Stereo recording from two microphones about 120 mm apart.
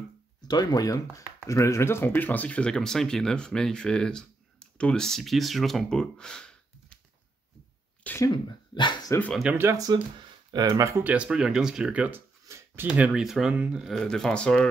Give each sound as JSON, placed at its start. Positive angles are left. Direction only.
{"t": 0.5, "sound": "speech", "side_deg": 35}
{"t": 8.0, "sound": "speech", "side_deg": 15}
{"t": 8.7, "sound": "speech", "side_deg": 40}
{"t": 9.5, "sound": "speech", "side_deg": -20}
{"t": 9.8, "sound": "speech", "side_deg": -30}
{"t": 11.1, "sound": "speech", "side_deg": -10}
{"t": 12.4, "sound": "a sound", "side_deg": -25}
{"t": 12.8, "sound": "speech", "side_deg": -10}